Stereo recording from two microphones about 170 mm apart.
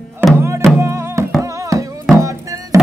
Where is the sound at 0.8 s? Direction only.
15° right (ahead or behind).